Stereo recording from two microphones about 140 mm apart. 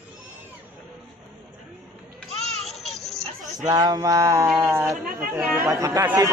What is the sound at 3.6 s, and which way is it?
Music, 25° right (ahead or behind).